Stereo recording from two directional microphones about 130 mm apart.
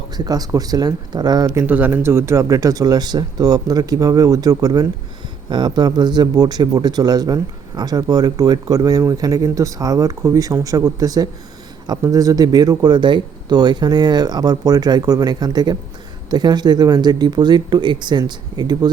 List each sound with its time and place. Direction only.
0.3 s a man's voice: 30° right (ahead or behind)
1.6 s a man's voice: 15° right (ahead or behind); by 18.9 s 30° right (ahead or behind)